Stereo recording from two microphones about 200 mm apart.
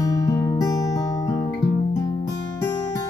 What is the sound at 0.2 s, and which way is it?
Music, 15° left (ahead or behind).